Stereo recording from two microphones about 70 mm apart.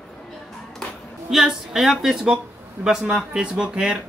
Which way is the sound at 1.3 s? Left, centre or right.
Centre.